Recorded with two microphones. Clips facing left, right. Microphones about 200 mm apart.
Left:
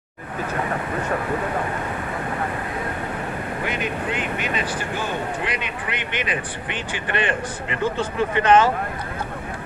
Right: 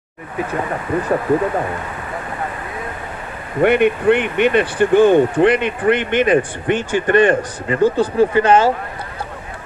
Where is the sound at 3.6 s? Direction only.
65° right (ahead or behind); by 8.7 s 30° right (ahead or behind).